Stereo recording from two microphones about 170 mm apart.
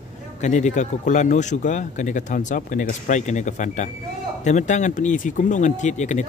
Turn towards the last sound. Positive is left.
turn(degrees=45)  # may be behind; listen again after turning